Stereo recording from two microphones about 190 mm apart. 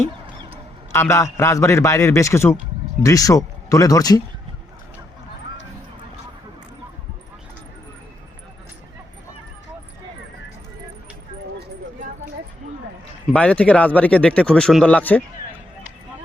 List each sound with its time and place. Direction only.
0.9 s a man's voice: 15° left (ahead or behind)
13.3 s speech: 5° left (ahead or behind)